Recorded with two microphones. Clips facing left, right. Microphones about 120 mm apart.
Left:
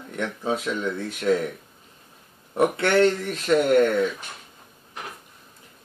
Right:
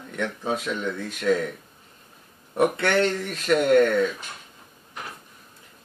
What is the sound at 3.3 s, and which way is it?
Speech, 25° left (ahead or behind).